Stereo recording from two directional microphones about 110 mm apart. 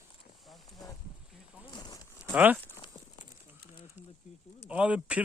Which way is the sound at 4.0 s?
15° right (ahead or behind).